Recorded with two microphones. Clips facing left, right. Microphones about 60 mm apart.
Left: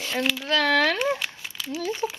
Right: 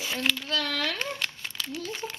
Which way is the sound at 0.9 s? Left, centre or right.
Centre.